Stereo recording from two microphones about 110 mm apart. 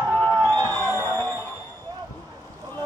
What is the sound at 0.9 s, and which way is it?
Music, 20° left (ahead or behind).